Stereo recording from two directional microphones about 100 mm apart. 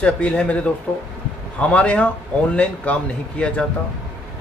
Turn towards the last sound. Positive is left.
turn(degrees=10)  # may be behind; listen again after turning